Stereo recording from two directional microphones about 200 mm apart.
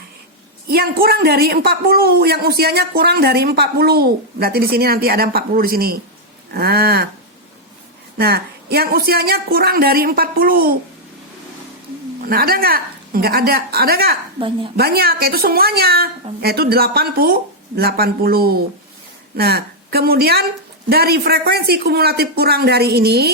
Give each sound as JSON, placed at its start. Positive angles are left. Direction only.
{"t": 0.7, "sound": "a man's voice", "side_deg": -50}
{"t": 8.2, "sound": "a man's voice", "side_deg": -50}
{"t": 12.2, "sound": "a man's voice", "side_deg": -45}
{"t": 14.3, "sound": "a woman's voice", "side_deg": -25}
{"t": 14.8, "sound": "a man's voice", "side_deg": -50}